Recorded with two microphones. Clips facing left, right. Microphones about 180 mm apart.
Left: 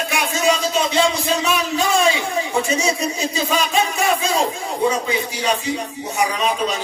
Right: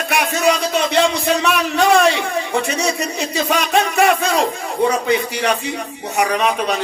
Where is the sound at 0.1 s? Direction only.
65° right (ahead or behind).